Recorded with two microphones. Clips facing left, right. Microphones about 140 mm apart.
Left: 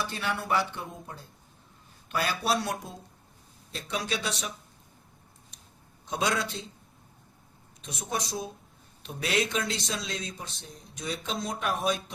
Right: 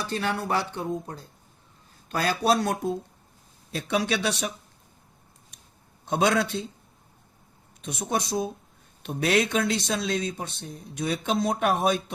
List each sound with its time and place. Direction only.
0.1 s a man's voice: 40° right (ahead or behind)
3.7 s speech: 65° right (ahead or behind)
6.1 s speech: 55° right (ahead or behind)
7.8 s speech: 55° right (ahead or behind)